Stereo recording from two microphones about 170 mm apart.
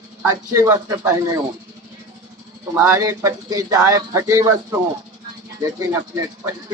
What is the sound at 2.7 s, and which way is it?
Speech, 15° right (ahead or behind).